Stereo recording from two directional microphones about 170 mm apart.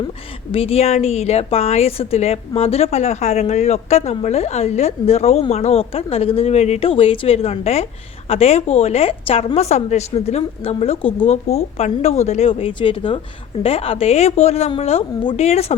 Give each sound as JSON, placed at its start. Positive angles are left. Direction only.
{"t": 0.5, "sound": "a woman's voice", "side_deg": 35}